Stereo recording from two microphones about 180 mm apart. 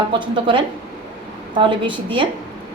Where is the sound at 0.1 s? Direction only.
25° right (ahead or behind).